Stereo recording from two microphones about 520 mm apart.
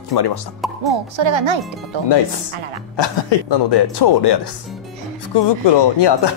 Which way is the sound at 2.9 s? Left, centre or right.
Left.